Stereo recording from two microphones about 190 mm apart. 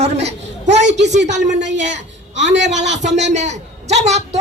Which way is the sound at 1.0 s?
65° right (ahead or behind).